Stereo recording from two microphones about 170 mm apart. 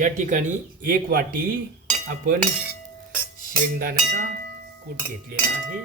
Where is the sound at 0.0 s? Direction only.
50° right (ahead or behind).